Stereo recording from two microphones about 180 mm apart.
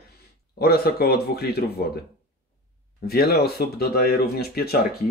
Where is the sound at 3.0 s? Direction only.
60° left (ahead or behind).